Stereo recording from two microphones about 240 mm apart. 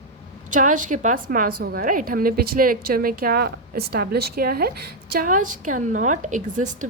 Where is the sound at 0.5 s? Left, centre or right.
Right.